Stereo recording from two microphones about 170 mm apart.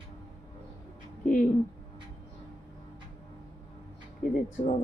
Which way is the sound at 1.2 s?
50° left (ahead or behind).